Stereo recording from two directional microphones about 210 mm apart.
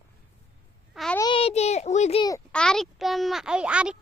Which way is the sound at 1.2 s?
25° left (ahead or behind).